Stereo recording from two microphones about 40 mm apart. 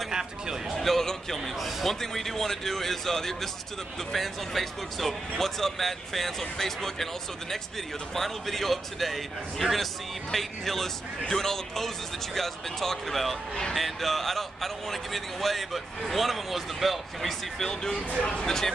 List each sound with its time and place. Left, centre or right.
0.1 s a sound: centre
0.7 s a man's voice: centre
8.1 s a man's voice: centre